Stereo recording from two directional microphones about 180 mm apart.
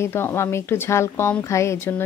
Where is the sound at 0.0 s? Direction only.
15° left (ahead or behind).